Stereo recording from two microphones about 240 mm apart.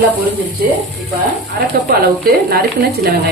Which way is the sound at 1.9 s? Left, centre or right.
Right.